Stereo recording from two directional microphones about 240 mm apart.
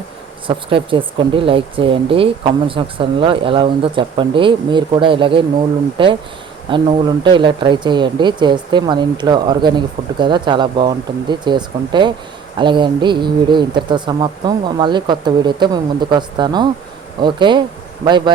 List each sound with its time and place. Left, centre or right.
0.4 s a man's voice: right